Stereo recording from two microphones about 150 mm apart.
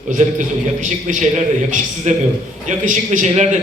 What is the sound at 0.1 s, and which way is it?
A man's voice, 55° right (ahead or behind).